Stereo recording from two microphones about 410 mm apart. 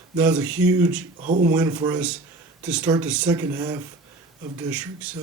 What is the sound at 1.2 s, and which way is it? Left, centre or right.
Speech, centre.